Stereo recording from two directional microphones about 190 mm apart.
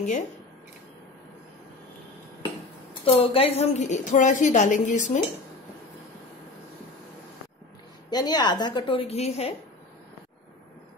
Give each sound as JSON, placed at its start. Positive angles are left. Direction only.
{"t": 2.9, "sound": "a woman's voice", "side_deg": 30}
{"t": 8.1, "sound": "a woman's voice", "side_deg": 20}